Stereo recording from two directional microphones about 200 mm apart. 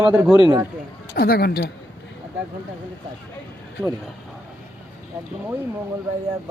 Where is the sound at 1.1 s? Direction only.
50° left (ahead or behind).